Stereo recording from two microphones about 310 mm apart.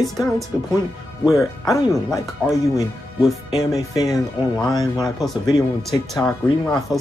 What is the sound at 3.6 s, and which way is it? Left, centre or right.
Speech, centre.